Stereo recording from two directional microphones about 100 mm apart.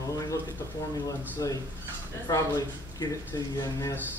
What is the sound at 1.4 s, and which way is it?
A man's voice, 35° left (ahead or behind).